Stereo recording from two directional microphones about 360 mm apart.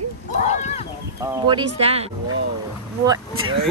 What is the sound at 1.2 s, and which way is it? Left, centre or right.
Speech, centre.